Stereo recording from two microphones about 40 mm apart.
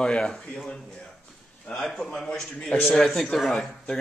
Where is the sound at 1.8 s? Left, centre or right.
Centre.